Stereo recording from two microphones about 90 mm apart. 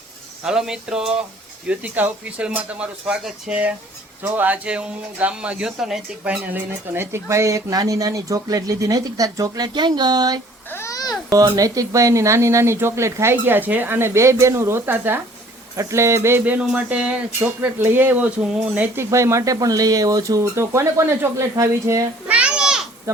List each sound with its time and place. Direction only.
0.4 s speech: 5° right (ahead or behind)
4.4 s speech: 20° right (ahead or behind)
6.2 s speech: 15° right (ahead or behind); by 10.4 s 50° right (ahead or behind)
10.7 s babbling: 30° left (ahead or behind)
10.9 s babbling: 45° left (ahead or behind)
11.5 s speech: 40° right (ahead or behind); by 15.2 s 25° right (ahead or behind)
15.7 s speech: 35° right (ahead or behind)
16.4 s speech: 15° right (ahead or behind)
18.9 s speech: 35° right (ahead or behind)
22.3 s children playing: 10° right (ahead or behind)